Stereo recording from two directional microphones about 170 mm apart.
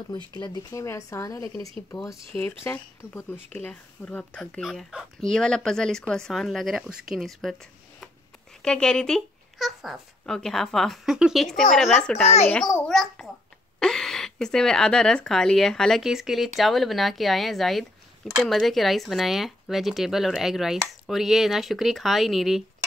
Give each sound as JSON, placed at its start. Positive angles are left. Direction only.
{"t": 0.3, "sound": "speech", "side_deg": 20}
{"t": 8.6, "sound": "a child's voice", "side_deg": 5}